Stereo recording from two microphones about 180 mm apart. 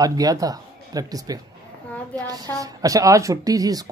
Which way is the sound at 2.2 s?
20° right (ahead or behind).